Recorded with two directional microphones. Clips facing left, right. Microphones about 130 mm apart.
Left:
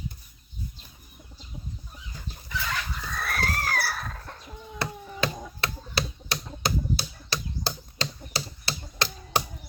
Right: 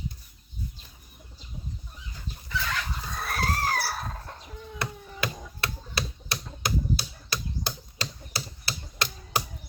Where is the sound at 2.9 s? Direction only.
25° right (ahead or behind).